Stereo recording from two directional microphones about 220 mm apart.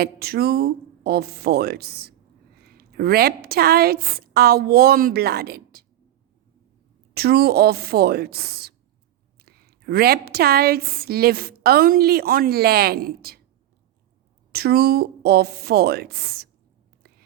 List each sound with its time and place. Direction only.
0.0 s a woman's voice: 45° right (ahead or behind)
7.1 s a woman's voice: 45° right (ahead or behind)
14.5 s a woman's voice: 45° right (ahead or behind)